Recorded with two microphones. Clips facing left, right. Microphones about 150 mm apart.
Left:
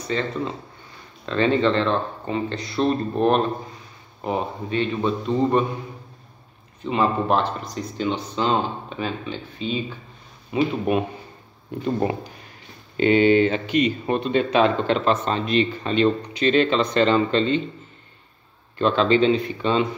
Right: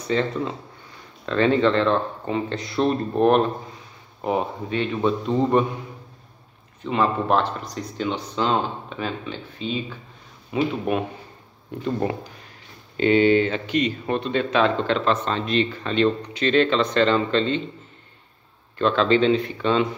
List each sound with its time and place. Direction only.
0.0 s a man's voice: 10° right (ahead or behind)
6.8 s speech: 5° left (ahead or behind)
11.8 s speech: 15° left (ahead or behind)
18.8 s speech: 5° left (ahead or behind)